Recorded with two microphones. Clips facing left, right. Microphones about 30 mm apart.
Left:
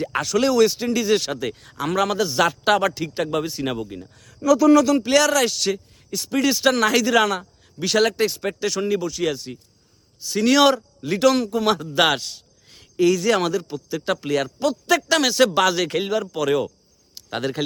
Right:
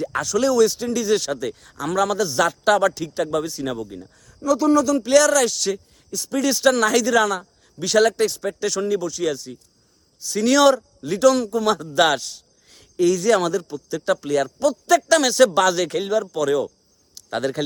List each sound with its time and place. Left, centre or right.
0.0 s speech: left
4.2 s speech: left
4.9 s speech: left
6.1 s speech: left
6.3 s speech: left
8.4 s speech: left
8.6 s speech: centre
11.9 s a sound: centre
13.1 s speech: centre
17.2 s speech: centre